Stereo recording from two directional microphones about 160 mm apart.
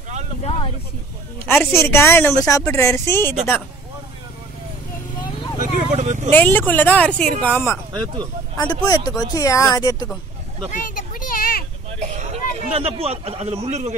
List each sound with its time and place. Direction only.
0.5 s vehicle: 35° left (ahead or behind)
1.4 s speech: 10° left (ahead or behind)
5.6 s a sound: 50° right (ahead or behind)
6.3 s speech: 10° left (ahead or behind)
7.9 s speech: 30° right (ahead or behind)
8.8 s speech: 25° left (ahead or behind)
10.7 s a sound: 60° left (ahead or behind)
12.0 s a man's voice: 45° right (ahead or behind)